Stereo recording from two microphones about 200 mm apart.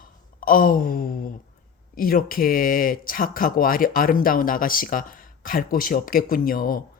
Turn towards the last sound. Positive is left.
turn(degrees=45)  # may be behind; listen again after turning